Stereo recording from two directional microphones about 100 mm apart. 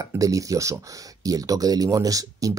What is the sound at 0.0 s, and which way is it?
Speech, 35° right (ahead or behind).